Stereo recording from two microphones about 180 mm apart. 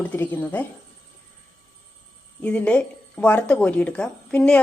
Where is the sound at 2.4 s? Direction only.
5° left (ahead or behind).